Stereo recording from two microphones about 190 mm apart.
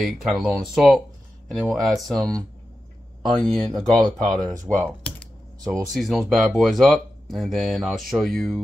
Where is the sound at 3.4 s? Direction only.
Centre (ahead or behind).